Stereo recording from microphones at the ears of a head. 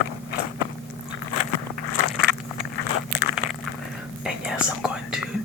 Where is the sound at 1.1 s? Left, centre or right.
Left.